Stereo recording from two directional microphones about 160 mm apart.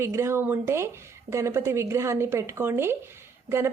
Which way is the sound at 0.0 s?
15° right (ahead or behind).